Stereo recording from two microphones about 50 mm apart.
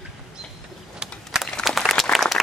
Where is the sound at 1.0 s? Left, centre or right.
Centre.